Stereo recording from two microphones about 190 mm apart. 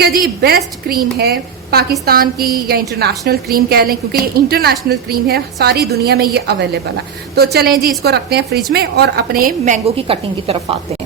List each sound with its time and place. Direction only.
0.0 s a woman's voice: 55° right (ahead or behind); by 10.8 s 30° right (ahead or behind)